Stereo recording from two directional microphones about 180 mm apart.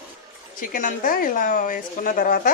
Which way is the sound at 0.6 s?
50° left (ahead or behind).